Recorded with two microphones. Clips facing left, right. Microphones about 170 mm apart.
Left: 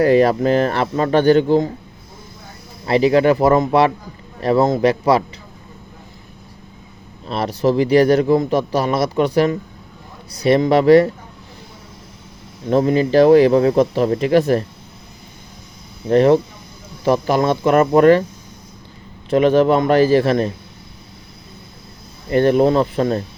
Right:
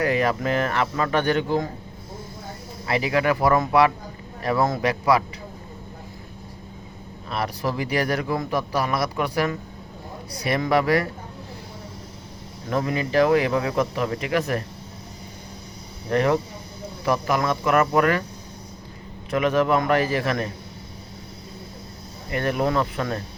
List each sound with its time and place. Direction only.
0.0 s speech: 35° left (ahead or behind)
2.8 s a man's voice: 30° left (ahead or behind)
7.3 s a man's voice: 25° left (ahead or behind)
12.6 s speech: 30° left (ahead or behind)
16.0 s a man's voice: 30° left (ahead or behind)
19.3 s a man's voice: 30° left (ahead or behind)
22.3 s a man's voice: 30° left (ahead or behind)